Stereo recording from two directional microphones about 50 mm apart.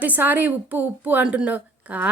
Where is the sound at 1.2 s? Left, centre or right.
Right.